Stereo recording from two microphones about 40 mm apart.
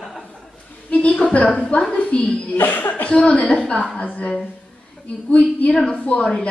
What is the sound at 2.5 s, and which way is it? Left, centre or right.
A woman's voice, left.